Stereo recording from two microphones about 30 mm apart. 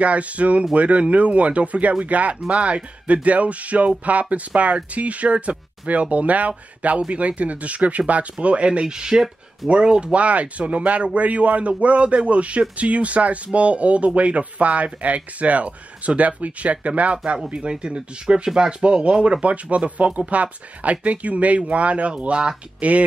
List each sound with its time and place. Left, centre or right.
0.0 s a man's voice: right
2.5 s a man's voice: right
8.8 s speech: right
10.1 s a man's voice: right
17.6 s speech: right
19.4 s a man's voice: right
22.8 s speech: right